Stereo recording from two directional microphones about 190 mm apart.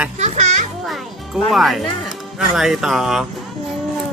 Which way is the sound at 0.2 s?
40° right (ahead or behind).